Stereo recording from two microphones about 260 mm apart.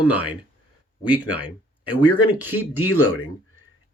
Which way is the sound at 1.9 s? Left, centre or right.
Left.